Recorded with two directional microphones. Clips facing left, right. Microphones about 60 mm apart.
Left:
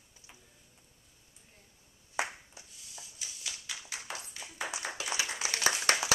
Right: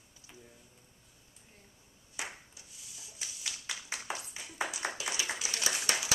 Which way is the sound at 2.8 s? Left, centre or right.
Centre.